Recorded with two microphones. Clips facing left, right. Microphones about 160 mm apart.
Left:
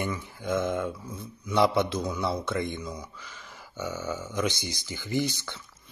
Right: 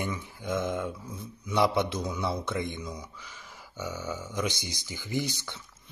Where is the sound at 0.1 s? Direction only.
15° right (ahead or behind).